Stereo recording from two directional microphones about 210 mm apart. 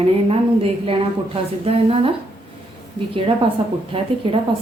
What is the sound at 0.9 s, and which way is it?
A woman's voice, 25° right (ahead or behind).